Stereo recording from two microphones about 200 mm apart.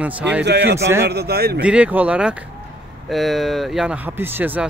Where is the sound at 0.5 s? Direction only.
55° right (ahead or behind).